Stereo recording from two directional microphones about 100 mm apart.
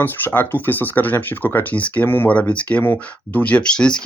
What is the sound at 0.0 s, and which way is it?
Speech, 20° left (ahead or behind).